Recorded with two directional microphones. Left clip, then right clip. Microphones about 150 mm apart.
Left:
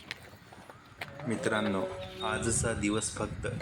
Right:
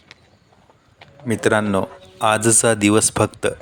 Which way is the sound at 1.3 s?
60° right (ahead or behind).